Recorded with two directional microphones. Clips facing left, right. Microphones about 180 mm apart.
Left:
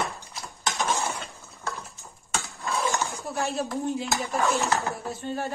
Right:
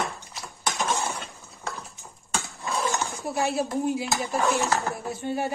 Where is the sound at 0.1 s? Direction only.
Centre (ahead or behind).